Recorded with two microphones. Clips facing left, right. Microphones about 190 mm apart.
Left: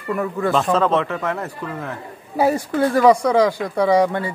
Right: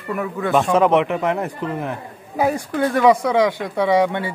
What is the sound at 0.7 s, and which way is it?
A man's voice, 15° right (ahead or behind).